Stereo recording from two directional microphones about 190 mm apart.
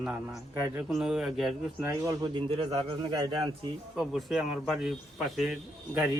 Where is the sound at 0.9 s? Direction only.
5° right (ahead or behind).